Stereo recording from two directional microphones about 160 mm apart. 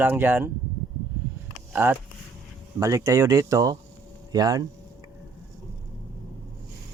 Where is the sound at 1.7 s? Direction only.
15° right (ahead or behind).